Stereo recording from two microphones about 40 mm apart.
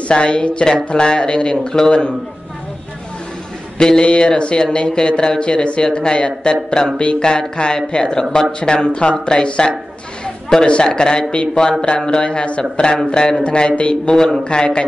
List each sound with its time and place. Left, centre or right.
0.1 s speech: left
3.7 s speech: left
14.1 s a man's voice: centre
14.4 s speech: left